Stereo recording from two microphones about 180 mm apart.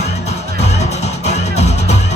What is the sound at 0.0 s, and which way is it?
Music, 40° left (ahead or behind).